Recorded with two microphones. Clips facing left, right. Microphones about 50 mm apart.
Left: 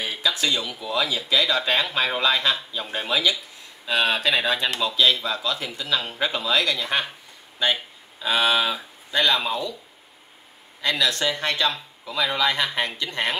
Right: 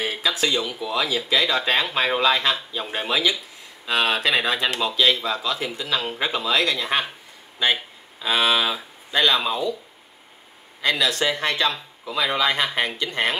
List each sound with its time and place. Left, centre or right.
0.0 s a sound: centre
0.6 s speech: centre
10.8 s speech: centre